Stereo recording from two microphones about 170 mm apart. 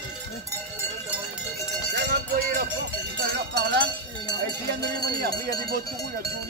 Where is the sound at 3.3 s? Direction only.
80° right.